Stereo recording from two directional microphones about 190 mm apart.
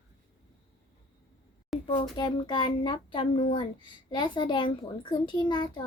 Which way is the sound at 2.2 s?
25° left (ahead or behind).